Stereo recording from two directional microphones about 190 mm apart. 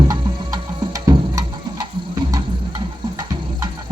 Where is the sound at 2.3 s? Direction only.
20° right (ahead or behind).